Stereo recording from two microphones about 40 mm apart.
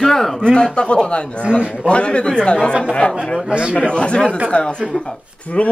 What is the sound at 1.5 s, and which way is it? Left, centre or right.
Speech, right.